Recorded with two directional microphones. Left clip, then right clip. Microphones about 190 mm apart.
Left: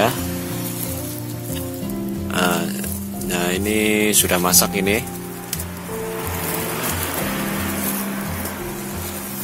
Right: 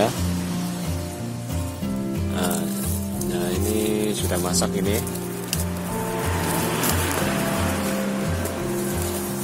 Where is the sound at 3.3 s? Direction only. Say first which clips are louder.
Left 5 dB; 15° left (ahead or behind).